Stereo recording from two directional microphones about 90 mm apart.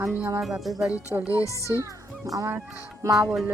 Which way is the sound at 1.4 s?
35° left (ahead or behind).